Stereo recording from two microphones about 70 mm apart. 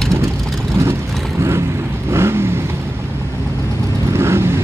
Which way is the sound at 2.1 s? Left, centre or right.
Right.